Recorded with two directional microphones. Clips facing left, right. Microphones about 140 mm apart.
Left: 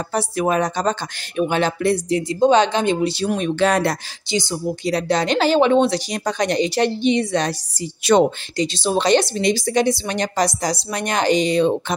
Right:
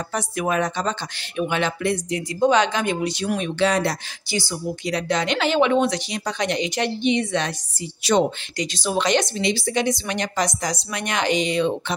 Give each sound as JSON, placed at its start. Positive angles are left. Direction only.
{"t": 0.1, "sound": "speech", "side_deg": 35}
{"t": 4.3, "sound": "speech", "side_deg": 20}
{"t": 4.8, "sound": "speech", "side_deg": 35}
{"t": 6.1, "sound": "speech", "side_deg": 45}
{"t": 8.5, "sound": "speech", "side_deg": 30}